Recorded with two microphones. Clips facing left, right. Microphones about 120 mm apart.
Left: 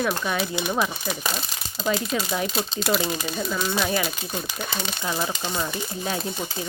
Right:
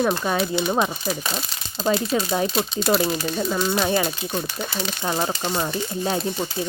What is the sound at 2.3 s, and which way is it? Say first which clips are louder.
Speech: right 4 dB; 35° right (ahead or behind).